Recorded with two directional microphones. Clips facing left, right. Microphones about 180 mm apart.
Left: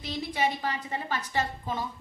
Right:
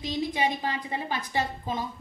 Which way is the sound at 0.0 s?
15° right (ahead or behind).